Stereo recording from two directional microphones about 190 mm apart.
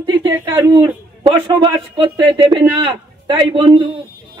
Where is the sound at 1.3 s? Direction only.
25° right (ahead or behind).